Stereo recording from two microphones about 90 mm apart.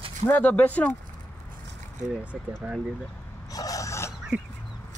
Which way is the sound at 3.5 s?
40° left (ahead or behind).